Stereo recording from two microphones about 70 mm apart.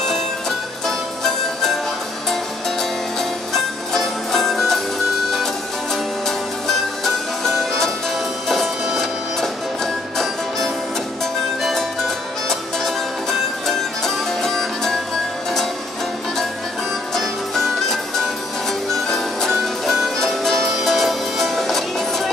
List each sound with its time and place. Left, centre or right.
0.0 s music: centre
2.8 s music: centre
6.2 s music: centre
12.4 s music: centre
17.1 s music: centre